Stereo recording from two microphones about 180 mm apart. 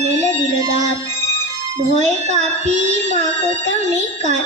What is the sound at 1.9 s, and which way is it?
Child singing, 40° right (ahead or behind).